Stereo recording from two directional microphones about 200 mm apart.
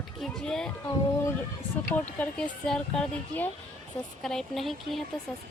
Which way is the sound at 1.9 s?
5° left (ahead or behind).